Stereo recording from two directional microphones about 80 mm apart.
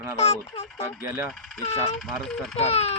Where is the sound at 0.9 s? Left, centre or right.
Centre.